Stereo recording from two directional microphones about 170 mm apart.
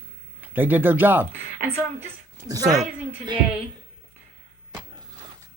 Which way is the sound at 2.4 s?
20° right (ahead or behind).